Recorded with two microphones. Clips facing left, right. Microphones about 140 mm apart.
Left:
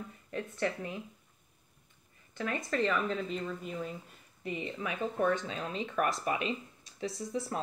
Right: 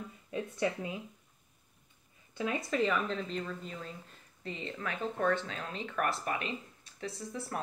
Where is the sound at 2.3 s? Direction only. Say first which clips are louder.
Right 1 dB; 10° right (ahead or behind).